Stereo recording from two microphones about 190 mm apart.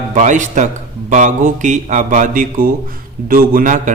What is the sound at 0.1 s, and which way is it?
Speech, 40° right (ahead or behind).